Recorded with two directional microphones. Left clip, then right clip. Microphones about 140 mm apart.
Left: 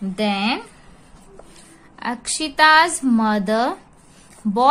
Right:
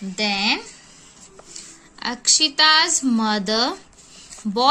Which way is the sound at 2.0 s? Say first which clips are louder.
Right 6 dB; 20° right (ahead or behind).